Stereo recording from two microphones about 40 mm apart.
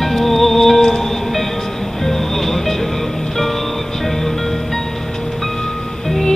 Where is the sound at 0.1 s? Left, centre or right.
Centre.